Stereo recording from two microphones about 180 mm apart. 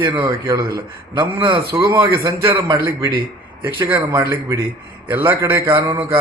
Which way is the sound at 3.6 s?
10° right (ahead or behind).